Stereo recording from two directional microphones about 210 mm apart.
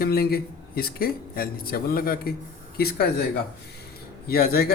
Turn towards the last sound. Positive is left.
turn(degrees=45)  # may be behind; listen again after turning